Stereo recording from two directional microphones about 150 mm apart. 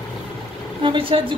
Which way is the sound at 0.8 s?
35° right (ahead or behind).